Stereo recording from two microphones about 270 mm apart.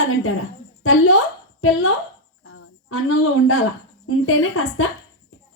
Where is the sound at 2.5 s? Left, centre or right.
Left.